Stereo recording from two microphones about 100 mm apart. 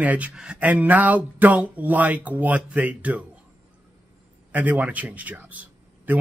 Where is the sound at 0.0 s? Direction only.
15° right (ahead or behind).